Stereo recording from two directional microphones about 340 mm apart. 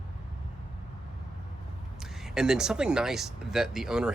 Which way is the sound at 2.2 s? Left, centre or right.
Centre.